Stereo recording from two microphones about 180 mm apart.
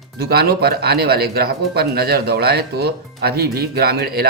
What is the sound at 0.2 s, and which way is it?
Speech, 60° right (ahead or behind).